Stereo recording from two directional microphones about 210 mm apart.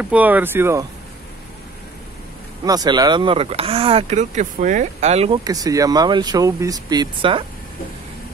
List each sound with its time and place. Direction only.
0.0 s speech: 5° right (ahead or behind)
2.6 s speech: 20° right (ahead or behind)